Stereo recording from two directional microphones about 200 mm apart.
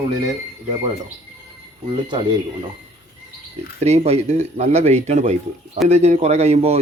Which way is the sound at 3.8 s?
30° right (ahead or behind).